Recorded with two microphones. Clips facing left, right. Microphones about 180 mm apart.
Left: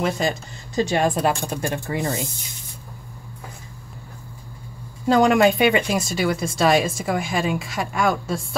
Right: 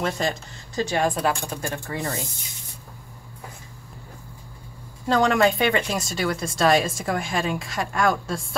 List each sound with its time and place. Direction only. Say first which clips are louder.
0.0 s speech: left 3 dB; 10° left (ahead or behind)
0.7 s speech: left 3 dB; 20° left (ahead or behind)
5.0 s speech: left 4 dB; 10° left (ahead or behind)